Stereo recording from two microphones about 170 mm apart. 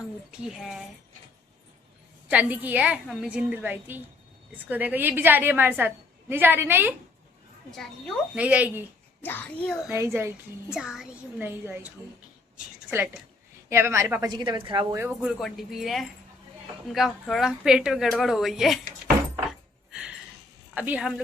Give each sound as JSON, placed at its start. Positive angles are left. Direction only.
{"t": 0.3, "sound": "speech", "side_deg": -5}
{"t": 2.3, "sound": "a woman's voice", "side_deg": -10}
{"t": 8.4, "sound": "a woman's voice", "side_deg": -10}
{"t": 9.2, "sound": "speech", "side_deg": 10}
{"t": 9.9, "sound": "a woman's voice", "side_deg": -15}
{"t": 10.7, "sound": "speech", "side_deg": -5}
{"t": 13.7, "sound": "a woman's voice", "side_deg": -15}
{"t": 14.9, "sound": "speech", "side_deg": -10}
{"t": 19.5, "sound": "keys jangling", "side_deg": -5}
{"t": 20.7, "sound": "a woman's voice", "side_deg": -10}